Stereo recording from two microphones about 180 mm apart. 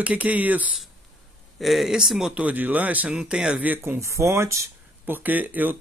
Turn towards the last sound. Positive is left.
turn(degrees=-10)  # may be behind; listen again after turning